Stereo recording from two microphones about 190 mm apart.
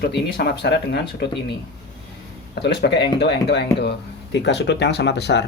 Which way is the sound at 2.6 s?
60° left (ahead or behind).